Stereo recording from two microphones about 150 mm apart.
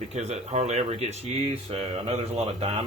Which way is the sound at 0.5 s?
45° right (ahead or behind).